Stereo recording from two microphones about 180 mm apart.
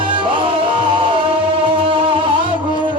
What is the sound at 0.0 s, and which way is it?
Music, 30° right (ahead or behind).